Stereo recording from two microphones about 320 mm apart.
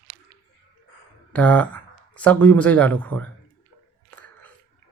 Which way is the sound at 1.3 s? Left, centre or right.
Centre.